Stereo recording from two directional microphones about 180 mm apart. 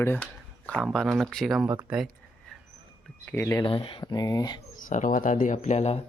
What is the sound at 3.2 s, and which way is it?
Speech, 15° left (ahead or behind).